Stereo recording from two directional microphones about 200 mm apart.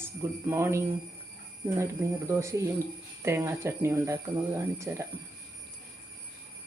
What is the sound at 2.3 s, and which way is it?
Speech, 15° right (ahead or behind).